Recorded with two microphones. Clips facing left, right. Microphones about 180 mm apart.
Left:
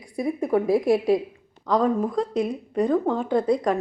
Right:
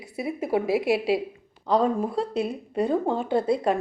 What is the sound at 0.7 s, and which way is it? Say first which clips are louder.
Speech: left 4 dB; 75° right (ahead or behind).